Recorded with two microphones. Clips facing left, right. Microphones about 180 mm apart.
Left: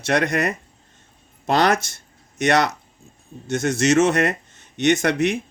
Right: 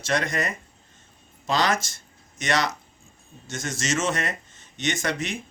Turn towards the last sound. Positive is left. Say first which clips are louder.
# left 9 dB
turn(degrees=60)  # may be behind; listen again after turning